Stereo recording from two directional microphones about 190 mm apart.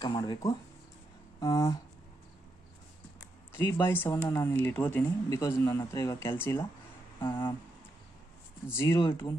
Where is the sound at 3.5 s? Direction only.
15° left (ahead or behind).